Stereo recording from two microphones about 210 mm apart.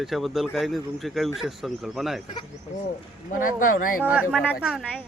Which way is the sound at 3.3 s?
40° left (ahead or behind).